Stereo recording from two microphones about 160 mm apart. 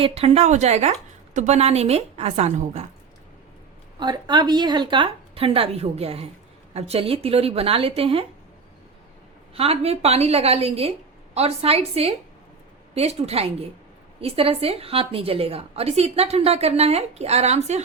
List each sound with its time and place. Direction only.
0.0 s a woman's voice: 40° right (ahead or behind)
4.0 s a woman's voice: 25° right (ahead or behind)
9.6 s a woman's voice: 40° right (ahead or behind)